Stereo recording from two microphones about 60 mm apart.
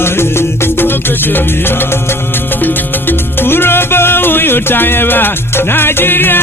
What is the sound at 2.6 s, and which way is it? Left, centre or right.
Music, left.